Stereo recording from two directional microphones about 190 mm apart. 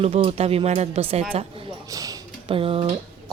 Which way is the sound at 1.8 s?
20° right (ahead or behind).